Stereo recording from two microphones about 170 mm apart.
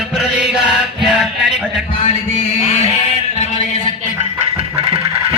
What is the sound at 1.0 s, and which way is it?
Music, centre (ahead or behind).